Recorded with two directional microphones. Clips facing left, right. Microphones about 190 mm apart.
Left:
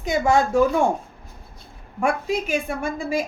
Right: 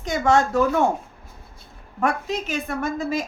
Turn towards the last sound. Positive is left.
turn(degrees=10)  # may be behind; listen again after turning